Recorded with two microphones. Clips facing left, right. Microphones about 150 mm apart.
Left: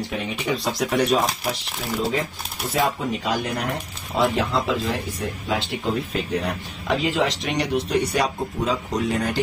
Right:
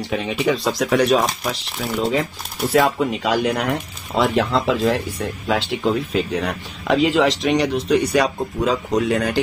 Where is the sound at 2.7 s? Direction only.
80° right.